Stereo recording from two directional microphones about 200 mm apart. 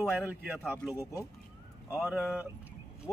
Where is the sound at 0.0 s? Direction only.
5° right (ahead or behind).